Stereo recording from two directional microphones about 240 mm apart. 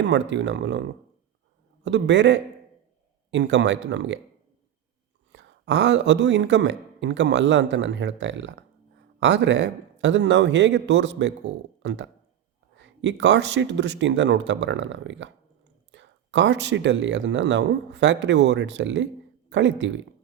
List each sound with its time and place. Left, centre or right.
0.0 s a man's voice: right
5.3 s a man's voice: right